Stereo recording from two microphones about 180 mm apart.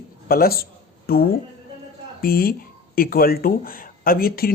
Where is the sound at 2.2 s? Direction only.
55° left (ahead or behind).